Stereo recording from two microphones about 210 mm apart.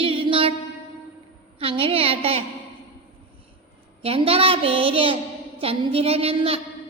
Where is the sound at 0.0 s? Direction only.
25° right (ahead or behind).